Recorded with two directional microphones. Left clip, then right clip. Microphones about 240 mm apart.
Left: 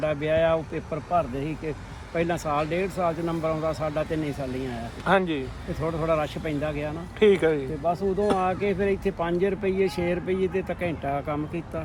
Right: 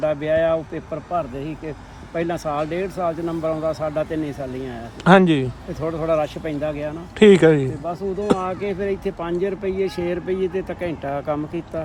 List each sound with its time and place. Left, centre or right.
0.0 s speech: centre
5.0 s speech: right
5.8 s speech: centre
7.2 s speech: right
7.9 s speech: centre